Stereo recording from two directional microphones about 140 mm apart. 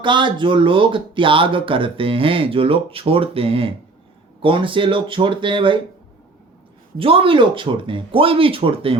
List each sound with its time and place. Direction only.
0.0 s speech: 35° right (ahead or behind)
6.9 s speech: 40° right (ahead or behind)